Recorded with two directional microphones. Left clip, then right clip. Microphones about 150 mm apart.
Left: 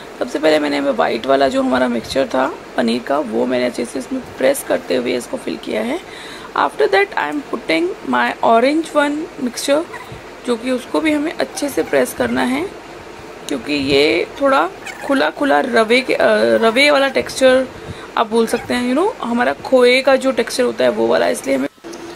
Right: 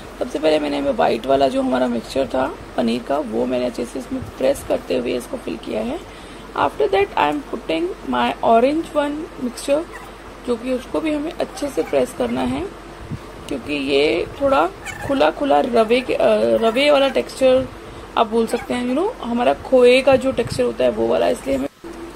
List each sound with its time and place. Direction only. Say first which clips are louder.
0.2 s a man's voice: left 3 dB; centre (ahead or behind)
9.7 s a man's voice: left 2 dB; 20° left (ahead or behind)